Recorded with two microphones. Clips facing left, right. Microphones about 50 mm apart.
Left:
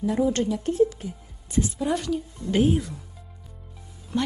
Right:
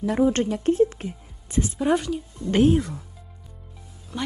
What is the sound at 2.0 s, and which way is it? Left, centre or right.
Speech, centre.